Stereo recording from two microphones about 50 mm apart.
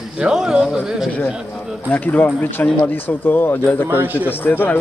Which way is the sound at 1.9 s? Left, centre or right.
Left.